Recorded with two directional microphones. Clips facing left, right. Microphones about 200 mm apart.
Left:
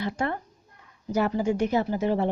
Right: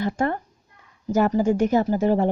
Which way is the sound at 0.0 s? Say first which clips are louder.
Right 5 dB; 45° right (ahead or behind).